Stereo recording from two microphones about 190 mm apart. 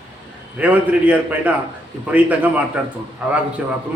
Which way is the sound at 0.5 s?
10° right (ahead or behind).